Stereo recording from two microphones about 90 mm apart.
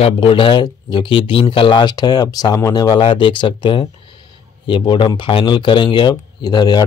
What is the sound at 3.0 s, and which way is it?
Speech, 70° left (ahead or behind).